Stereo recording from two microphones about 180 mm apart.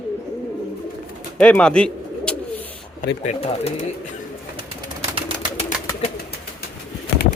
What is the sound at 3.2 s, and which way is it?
Speech, 35° left (ahead or behind).